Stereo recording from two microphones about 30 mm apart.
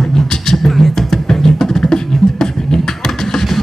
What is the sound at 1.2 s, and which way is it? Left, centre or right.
Music, centre.